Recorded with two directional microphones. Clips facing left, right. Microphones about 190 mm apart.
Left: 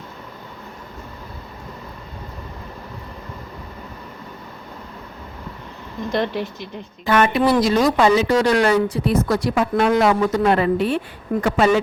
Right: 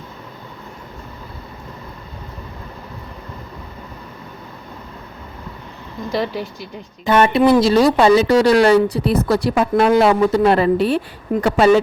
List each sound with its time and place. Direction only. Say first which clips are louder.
6.1 s speech: even; 5° right (ahead or behind)
7.0 s speech: right 3 dB; 25° right (ahead or behind)